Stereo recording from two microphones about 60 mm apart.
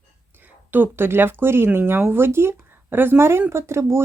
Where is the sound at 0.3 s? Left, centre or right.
Right.